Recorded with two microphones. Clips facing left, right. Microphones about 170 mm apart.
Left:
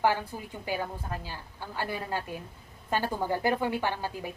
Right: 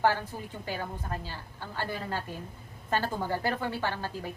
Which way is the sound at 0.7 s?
10° left (ahead or behind).